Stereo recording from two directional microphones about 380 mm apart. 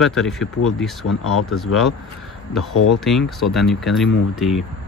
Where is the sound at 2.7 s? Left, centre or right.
Left.